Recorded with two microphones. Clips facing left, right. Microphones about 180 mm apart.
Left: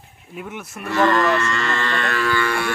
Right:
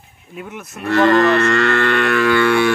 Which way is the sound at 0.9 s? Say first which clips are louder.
Right 5 dB; 65° right (ahead or behind).